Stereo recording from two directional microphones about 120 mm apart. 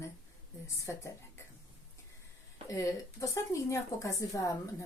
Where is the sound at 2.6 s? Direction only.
25° left (ahead or behind).